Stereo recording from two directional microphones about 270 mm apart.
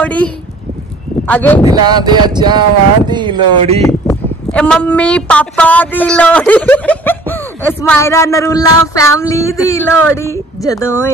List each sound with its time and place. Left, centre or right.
0.0 s a woman's voice: centre
1.6 s speech: centre
3.8 s speech: centre